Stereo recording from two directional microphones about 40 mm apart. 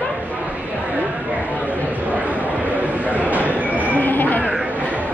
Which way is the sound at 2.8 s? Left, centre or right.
Right.